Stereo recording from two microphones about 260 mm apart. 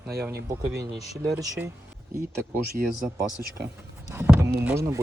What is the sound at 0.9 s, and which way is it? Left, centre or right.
Speech, centre.